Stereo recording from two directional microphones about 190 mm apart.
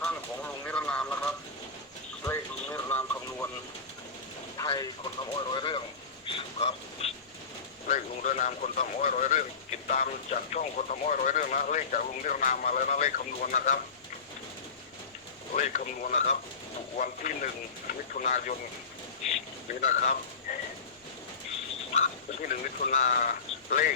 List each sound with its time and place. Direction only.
0.0 s vehicle: 5° left (ahead or behind)
2.2 s a sound: 15° left (ahead or behind)
4.5 s a sound: 15° left (ahead or behind)
7.9 s speech: 40° left (ahead or behind)
15.5 s speech: 45° left (ahead or behind)
19.8 s speech: 40° left (ahead or behind)
21.9 s speech: 45° left (ahead or behind)